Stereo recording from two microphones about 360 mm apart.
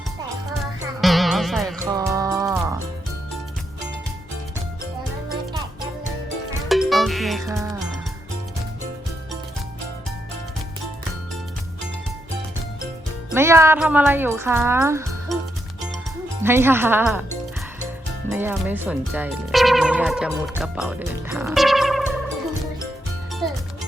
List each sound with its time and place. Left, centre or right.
1.0 s music: centre
2.0 s moo: centre
6.7 s music: centre
13.3 s speech: centre
16.4 s speech: centre
18.3 s speech: centre
23.4 s music: centre